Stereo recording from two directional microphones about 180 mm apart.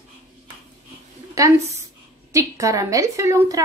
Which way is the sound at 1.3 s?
15° right (ahead or behind).